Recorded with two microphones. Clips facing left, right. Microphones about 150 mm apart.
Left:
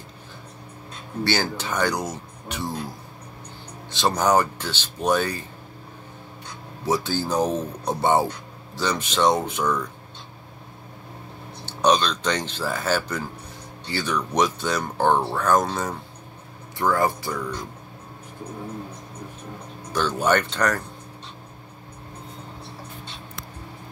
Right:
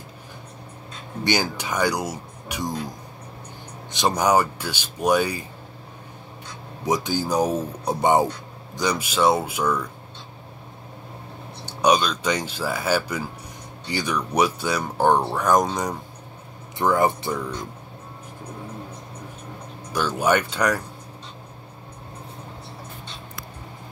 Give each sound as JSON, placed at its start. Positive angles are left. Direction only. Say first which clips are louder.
{"t": 1.2, "sound": "speech", "louder": "right 1 dB", "side_deg": -15}
{"t": 3.9, "sound": "speech", "louder": "even", "side_deg": -15}
{"t": 6.9, "sound": "speech", "louder": "right 1 dB", "side_deg": -15}
{"t": 11.6, "sound": "speech", "louder": "right 1 dB", "side_deg": -10}
{"t": 19.9, "sound": "speech", "louder": "even", "side_deg": -10}